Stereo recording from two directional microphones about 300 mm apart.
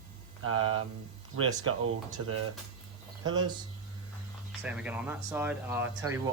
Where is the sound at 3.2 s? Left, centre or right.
Centre.